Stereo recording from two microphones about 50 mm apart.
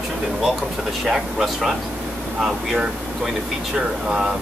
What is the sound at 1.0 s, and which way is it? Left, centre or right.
Speech, centre.